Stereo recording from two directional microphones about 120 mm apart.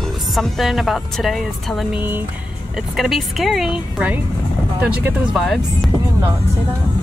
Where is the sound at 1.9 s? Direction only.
15° right (ahead or behind).